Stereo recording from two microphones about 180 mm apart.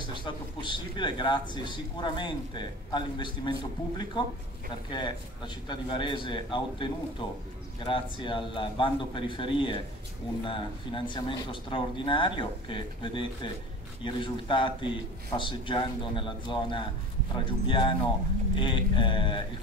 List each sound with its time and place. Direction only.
0.2 s a man's voice: 25° left (ahead or behind)